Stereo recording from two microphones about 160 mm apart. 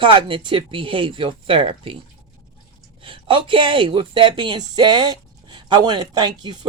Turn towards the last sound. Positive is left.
turn(degrees=-25)  # may be behind; listen again after turning